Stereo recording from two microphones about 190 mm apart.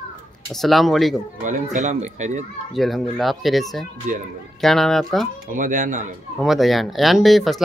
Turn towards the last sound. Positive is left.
turn(degrees=0)  # may be behind; listen again after turning